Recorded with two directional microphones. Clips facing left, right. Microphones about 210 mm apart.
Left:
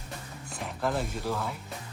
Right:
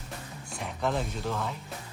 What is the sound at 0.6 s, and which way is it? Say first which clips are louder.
Speech: even; 5° left (ahead or behind).